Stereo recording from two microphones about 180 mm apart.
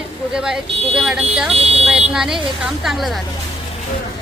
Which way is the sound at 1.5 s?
35° right (ahead or behind).